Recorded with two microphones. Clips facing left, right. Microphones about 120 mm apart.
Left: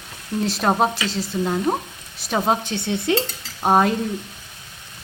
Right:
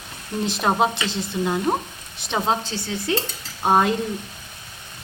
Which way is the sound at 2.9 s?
25° left (ahead or behind).